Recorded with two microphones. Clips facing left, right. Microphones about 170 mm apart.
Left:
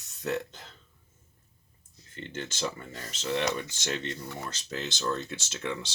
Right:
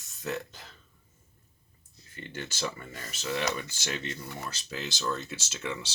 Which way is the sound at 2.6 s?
25° left (ahead or behind).